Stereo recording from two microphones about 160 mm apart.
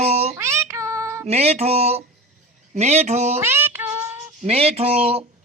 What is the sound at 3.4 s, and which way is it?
Child singing, 15° right (ahead or behind).